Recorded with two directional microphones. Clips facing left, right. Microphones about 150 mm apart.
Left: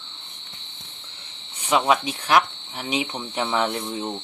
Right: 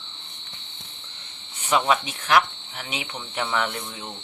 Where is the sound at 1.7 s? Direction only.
15° left (ahead or behind).